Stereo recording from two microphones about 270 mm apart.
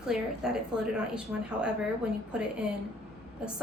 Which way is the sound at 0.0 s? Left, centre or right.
Centre.